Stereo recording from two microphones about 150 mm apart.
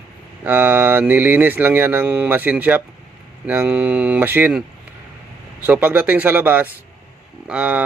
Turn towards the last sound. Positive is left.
turn(degrees=-10)  # may be behind; listen again after turning